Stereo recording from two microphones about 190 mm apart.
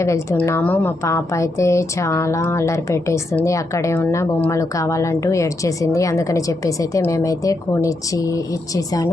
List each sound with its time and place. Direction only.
0.0 s speech: 15° left (ahead or behind)